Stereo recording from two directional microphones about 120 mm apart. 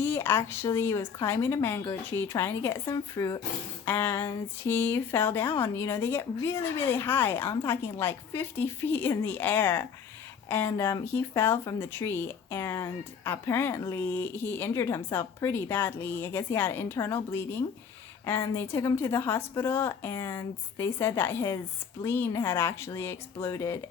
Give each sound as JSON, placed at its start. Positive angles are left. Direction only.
{"t": 0.0, "sound": "speech", "side_deg": 20}
{"t": 3.8, "sound": "speech", "side_deg": 20}
{"t": 18.4, "sound": "speech", "side_deg": 20}